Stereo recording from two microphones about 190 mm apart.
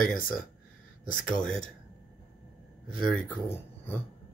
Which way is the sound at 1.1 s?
5° left (ahead or behind).